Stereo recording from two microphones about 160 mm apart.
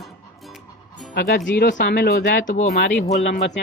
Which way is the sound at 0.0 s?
Centre (ahead or behind).